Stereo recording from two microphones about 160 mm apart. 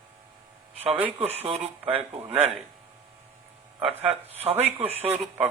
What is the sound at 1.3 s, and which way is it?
Speech, 40° right (ahead or behind).